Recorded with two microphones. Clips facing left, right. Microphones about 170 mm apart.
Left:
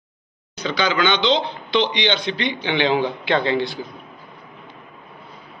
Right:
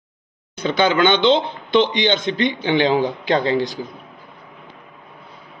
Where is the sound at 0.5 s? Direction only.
50° right (ahead or behind).